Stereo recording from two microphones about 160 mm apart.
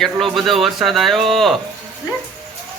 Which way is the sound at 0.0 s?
Centre (ahead or behind).